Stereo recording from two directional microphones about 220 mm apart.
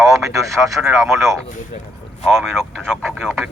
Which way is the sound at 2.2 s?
Centre (ahead or behind).